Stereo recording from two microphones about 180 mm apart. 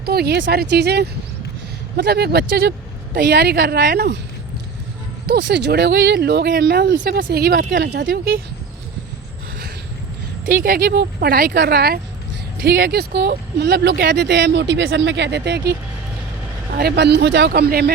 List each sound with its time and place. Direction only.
0.0 s speech: 60° right (ahead or behind)
5.2 s speech: 70° right (ahead or behind); by 7.8 s 50° right (ahead or behind)
7.8 s speech: 65° right (ahead or behind)
10.4 s speech: 50° right (ahead or behind)